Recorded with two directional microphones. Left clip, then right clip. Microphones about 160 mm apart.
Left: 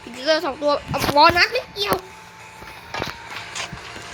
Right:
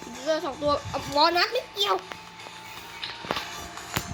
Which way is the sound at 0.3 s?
5° left (ahead or behind).